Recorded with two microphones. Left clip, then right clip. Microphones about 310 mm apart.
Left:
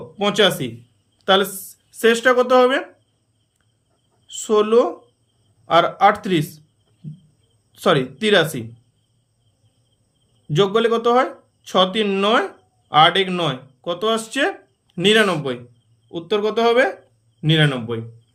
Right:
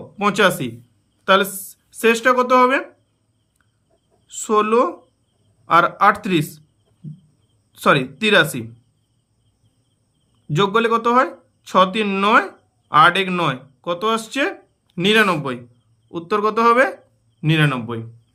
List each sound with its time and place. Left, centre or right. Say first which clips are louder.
0.2 s speech: even; centre
4.3 s speech: even; centre
7.7 s speech: right 1 dB; centre
10.5 s speech: even; centre